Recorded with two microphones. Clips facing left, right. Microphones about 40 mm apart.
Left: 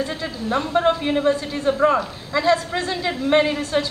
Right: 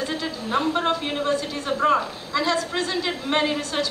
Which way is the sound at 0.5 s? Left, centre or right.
Centre.